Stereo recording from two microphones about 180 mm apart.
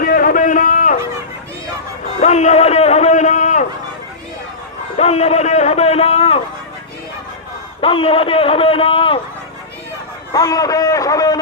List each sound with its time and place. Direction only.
0.0 s a sound: 50° left (ahead or behind)
2.2 s a man's voice: 40° left (ahead or behind)
4.9 s a man's voice: 35° left (ahead or behind)
7.8 s a man's voice: 30° left (ahead or behind)
10.3 s a man's voice: 20° left (ahead or behind)